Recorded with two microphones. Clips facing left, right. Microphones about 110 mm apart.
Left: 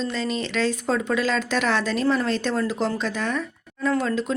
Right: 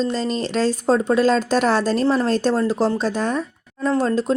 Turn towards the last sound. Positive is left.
turn(degrees=-35)  # may be behind; listen again after turning